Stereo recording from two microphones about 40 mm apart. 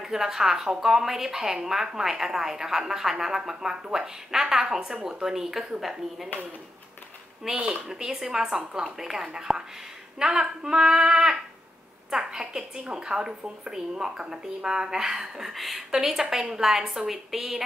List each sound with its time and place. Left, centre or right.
0.0 s speech: centre
7.4 s a woman's voice: centre
15.5 s a woman's voice: centre